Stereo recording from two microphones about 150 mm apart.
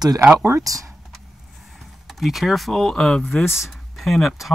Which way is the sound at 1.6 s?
Centre (ahead or behind).